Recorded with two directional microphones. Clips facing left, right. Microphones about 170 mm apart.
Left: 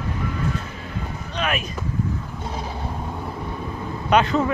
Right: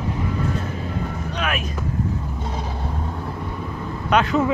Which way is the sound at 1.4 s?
Centre (ahead or behind).